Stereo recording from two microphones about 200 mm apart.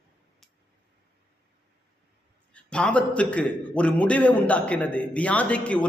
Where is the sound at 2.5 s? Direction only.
5° left (ahead or behind).